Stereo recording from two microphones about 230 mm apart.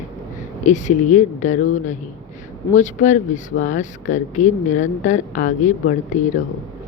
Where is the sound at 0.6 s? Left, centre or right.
Left.